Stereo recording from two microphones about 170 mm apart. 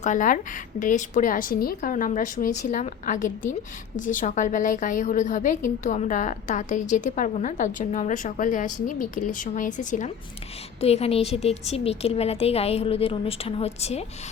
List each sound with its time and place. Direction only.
0.0 s a woman's voice: 50° left (ahead or behind)
10.8 s a woman's voice: 35° left (ahead or behind)